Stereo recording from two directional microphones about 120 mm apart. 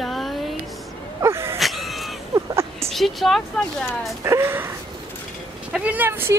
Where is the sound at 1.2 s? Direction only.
20° right (ahead or behind).